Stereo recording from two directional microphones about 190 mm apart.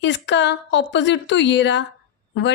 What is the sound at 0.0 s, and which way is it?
A woman's voice, 70° left (ahead or behind).